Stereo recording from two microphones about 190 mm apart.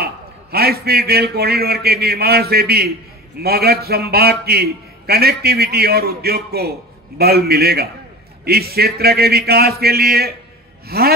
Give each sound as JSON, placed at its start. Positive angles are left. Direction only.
{"t": 0.0, "sound": "a man's voice", "side_deg": -55}